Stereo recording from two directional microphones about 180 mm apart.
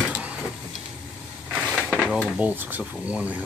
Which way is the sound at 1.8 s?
5° right (ahead or behind).